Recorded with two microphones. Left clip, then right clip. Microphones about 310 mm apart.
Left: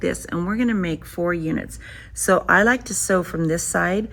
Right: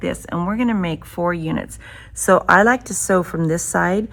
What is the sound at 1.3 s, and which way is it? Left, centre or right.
A woman's voice, right.